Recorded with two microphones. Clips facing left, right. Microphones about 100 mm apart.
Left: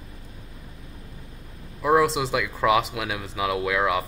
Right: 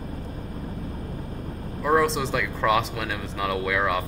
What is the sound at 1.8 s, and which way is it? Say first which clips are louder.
Speech: left 1 dB; 5° left (ahead or behind).